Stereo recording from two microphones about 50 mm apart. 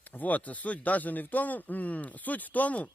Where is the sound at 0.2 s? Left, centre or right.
Left.